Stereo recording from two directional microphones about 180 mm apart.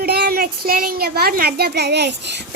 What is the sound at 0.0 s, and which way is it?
A child's voice, 60° right (ahead or behind).